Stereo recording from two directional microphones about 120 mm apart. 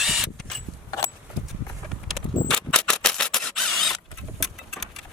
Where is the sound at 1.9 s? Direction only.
5° left (ahead or behind).